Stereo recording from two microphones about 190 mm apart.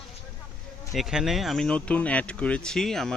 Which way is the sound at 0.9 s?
Centre (ahead or behind).